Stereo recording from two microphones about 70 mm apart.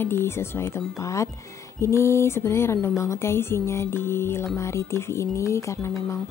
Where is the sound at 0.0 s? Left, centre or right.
Left.